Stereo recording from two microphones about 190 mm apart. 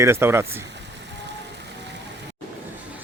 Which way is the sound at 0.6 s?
65° right (ahead or behind).